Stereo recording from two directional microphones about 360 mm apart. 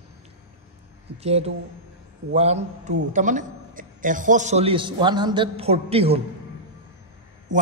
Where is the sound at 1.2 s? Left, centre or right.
Centre.